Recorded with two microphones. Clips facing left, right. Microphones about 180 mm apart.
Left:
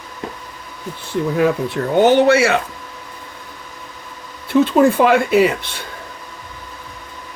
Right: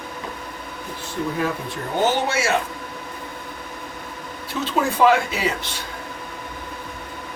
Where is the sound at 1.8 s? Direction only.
75° left (ahead or behind).